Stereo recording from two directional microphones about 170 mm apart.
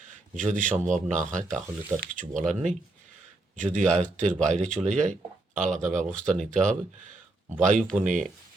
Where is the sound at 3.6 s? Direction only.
45° right (ahead or behind).